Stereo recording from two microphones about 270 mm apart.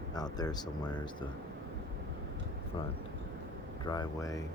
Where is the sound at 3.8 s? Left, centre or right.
Centre.